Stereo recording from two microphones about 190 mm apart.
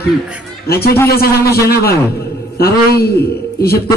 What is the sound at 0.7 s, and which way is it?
A man's voice, 55° left (ahead or behind).